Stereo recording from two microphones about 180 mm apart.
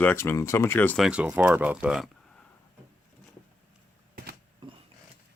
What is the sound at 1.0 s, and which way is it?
Speech, 5° right (ahead or behind).